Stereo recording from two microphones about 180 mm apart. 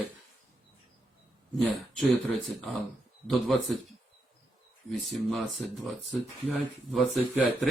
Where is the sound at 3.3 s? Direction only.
Centre (ahead or behind).